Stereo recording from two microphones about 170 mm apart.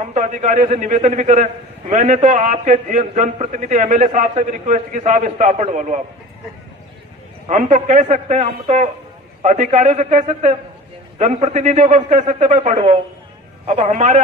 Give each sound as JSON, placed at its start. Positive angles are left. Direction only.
{"t": 0.1, "sound": "a man's voice", "side_deg": -45}
{"t": 7.4, "sound": "a man's voice", "side_deg": -45}